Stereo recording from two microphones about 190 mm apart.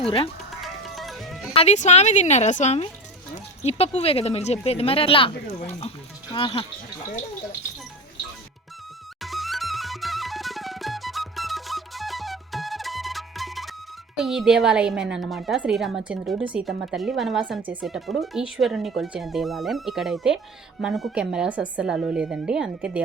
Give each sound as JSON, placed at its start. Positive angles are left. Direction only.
{"t": 0.6, "sound": "music", "side_deg": 0}
{"t": 1.5, "sound": "speech", "side_deg": 35}
{"t": 9.2, "sound": "music", "side_deg": 0}
{"t": 14.2, "sound": "a woman's voice", "side_deg": 0}